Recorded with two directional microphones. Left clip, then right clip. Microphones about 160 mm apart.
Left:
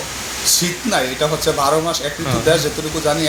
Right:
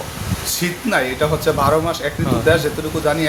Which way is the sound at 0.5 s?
30° right (ahead or behind).